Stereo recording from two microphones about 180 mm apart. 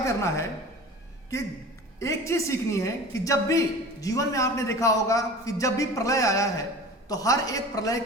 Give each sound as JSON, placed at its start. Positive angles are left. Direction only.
{"t": 0.0, "sound": "a woman's voice", "side_deg": 15}
{"t": 2.0, "sound": "a man's voice", "side_deg": 15}